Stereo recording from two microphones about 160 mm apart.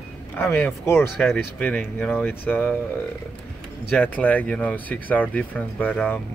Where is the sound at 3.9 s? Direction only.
10° left (ahead or behind).